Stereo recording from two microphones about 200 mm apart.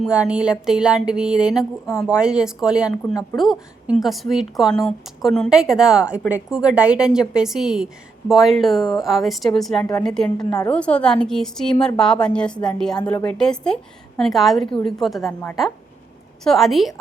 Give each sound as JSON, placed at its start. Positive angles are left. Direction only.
{"t": 0.0, "sound": "a woman's voice", "side_deg": -5}
{"t": 10.3, "sound": "a woman's voice", "side_deg": 20}
{"t": 10.7, "sound": "a woman's voice", "side_deg": 5}